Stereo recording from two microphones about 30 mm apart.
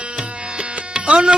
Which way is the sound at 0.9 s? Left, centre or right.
Right.